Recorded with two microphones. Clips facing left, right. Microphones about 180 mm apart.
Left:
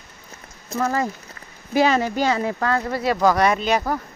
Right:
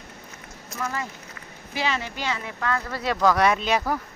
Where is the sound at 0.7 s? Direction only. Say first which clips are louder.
Left 9 dB; 40° left (ahead or behind).